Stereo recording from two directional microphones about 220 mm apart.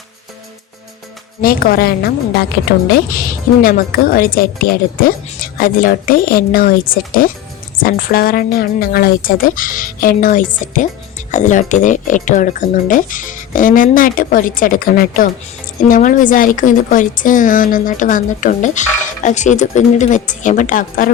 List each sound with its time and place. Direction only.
1.4 s a woman's voice: 40° left (ahead or behind)